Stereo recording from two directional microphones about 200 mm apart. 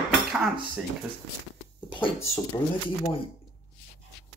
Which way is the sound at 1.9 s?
25° left (ahead or behind).